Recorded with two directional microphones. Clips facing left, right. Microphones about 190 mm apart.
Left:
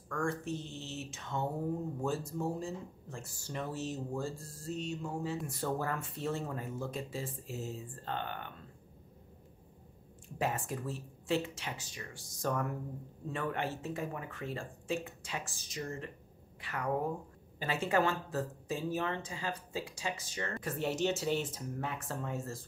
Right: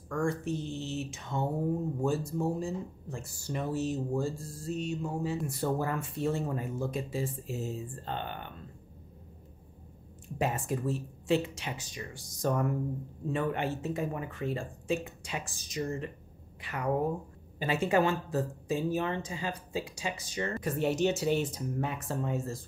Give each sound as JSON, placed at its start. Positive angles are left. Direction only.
{"t": 0.1, "sound": "speech", "side_deg": -10}
{"t": 10.4, "sound": "speech", "side_deg": -20}